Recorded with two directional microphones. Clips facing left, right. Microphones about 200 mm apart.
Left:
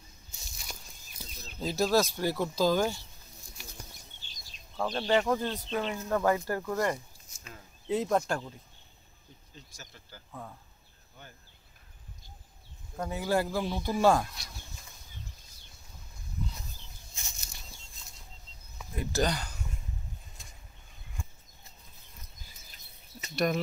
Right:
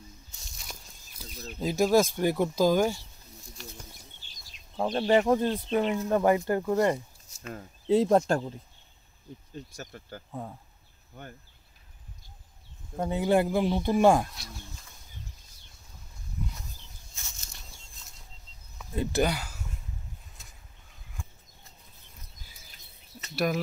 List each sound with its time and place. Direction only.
1.6 s speech: 15° right (ahead or behind)
4.7 s speech: 25° right (ahead or behind)
9.6 s speech: 55° right (ahead or behind)
12.9 s speech: 25° right (ahead or behind)
17.1 s a sound: 10° left (ahead or behind)
19.2 s speech: 5° right (ahead or behind)
23.3 s speech: 5° right (ahead or behind)